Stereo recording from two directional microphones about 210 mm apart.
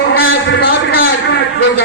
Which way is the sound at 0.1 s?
45° left (ahead or behind).